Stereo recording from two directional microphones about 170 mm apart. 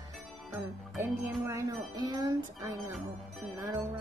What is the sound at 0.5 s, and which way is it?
Music, 15° right (ahead or behind).